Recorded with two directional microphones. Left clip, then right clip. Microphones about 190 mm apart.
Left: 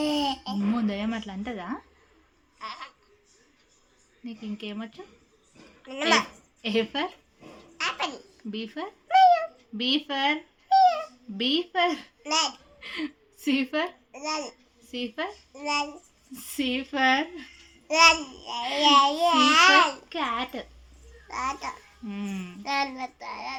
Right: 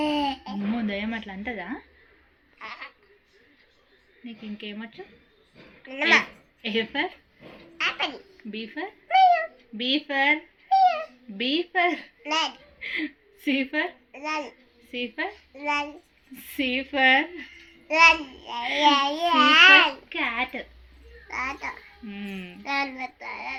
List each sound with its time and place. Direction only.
0.0 s babbling: 15° left (ahead or behind)
4.3 s a woman's voice: 25° left (ahead or behind)
5.8 s a child's voice: 15° left (ahead or behind)
7.8 s babbling: 15° left (ahead or behind)
8.5 s speech: 25° left (ahead or behind)
14.1 s a child's voice: 15° left (ahead or behind)
15.5 s a child's voice: 15° left (ahead or behind)
22.1 s speech: 30° left (ahead or behind)
22.6 s a child's voice: 15° left (ahead or behind)